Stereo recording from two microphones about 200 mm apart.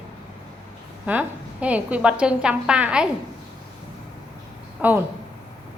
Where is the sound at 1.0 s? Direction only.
5° right (ahead or behind).